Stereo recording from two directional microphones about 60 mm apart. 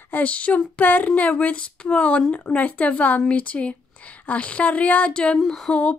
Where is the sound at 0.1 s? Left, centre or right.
Left.